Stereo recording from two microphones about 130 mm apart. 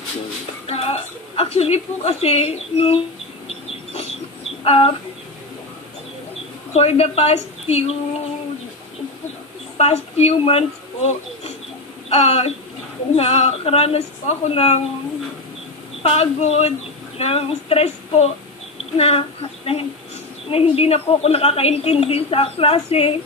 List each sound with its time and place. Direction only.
0.7 s a woman's voice: 50° left (ahead or behind)
3.4 s chicken: 55° left (ahead or behind)
4.6 s a woman's voice: 45° left (ahead or behind)
6.7 s a woman's voice: 55° left (ahead or behind)
9.8 s a woman's voice: 55° left (ahead or behind)
16.0 s a woman's voice: 50° left (ahead or behind)